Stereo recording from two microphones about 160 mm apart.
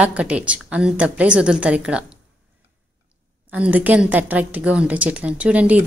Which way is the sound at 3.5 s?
10° right (ahead or behind).